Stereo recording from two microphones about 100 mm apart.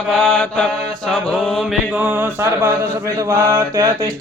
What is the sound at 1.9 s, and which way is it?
Mantra, 20° right (ahead or behind).